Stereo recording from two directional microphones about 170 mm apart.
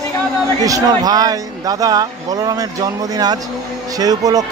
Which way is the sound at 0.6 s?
20° right (ahead or behind).